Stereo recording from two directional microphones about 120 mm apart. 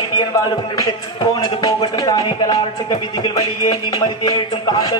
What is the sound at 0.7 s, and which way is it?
Music, 35° left (ahead or behind).